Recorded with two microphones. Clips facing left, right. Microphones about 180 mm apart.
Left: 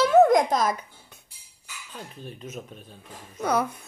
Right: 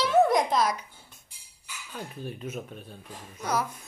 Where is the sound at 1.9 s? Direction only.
10° right (ahead or behind).